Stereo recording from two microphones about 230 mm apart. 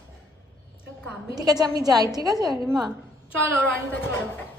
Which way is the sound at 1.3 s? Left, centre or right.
Centre.